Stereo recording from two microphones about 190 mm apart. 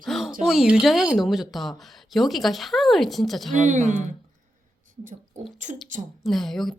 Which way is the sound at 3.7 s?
40° right (ahead or behind).